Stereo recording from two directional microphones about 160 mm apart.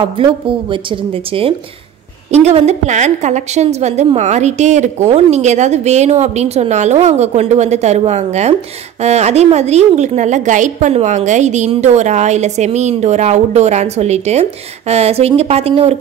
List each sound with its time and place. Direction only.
0.0 s a woman's voice: 30° right (ahead or behind)